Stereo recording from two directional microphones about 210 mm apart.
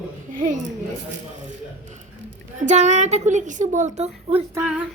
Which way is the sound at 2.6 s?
35° right (ahead or behind).